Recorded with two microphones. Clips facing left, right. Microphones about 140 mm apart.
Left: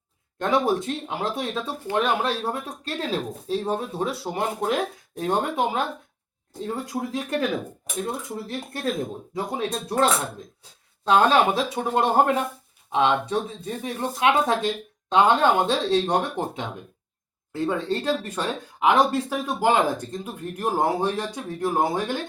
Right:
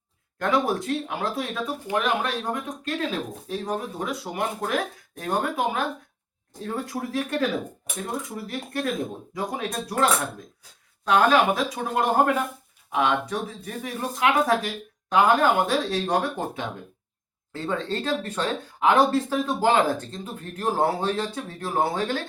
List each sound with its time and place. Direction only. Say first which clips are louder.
0.3 s speech: left 2 dB; 25° left (ahead or behind)
8.4 s speech: even; 25° left (ahead or behind)
17.5 s speech: left 3 dB; 15° left (ahead or behind)